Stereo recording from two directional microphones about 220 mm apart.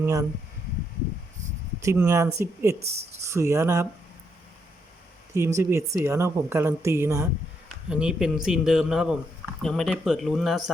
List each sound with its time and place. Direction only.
0.0 s speech: 15° right (ahead or behind)
1.8 s speech: 15° right (ahead or behind)
2.8 s speech: 30° right (ahead or behind)
3.2 s speech: 10° right (ahead or behind)
5.5 s a man's voice: 10° right (ahead or behind)